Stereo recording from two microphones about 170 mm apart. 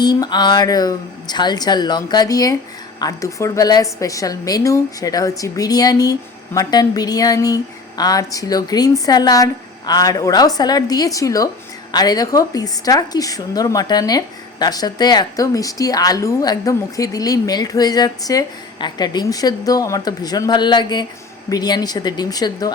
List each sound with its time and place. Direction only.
0.0 s a woman's voice: 25° left (ahead or behind)